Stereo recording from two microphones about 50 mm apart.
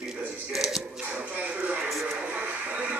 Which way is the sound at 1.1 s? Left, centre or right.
Right.